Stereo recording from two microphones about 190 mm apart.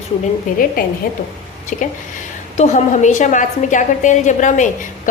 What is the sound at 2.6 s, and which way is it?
A woman's voice, 40° left (ahead or behind).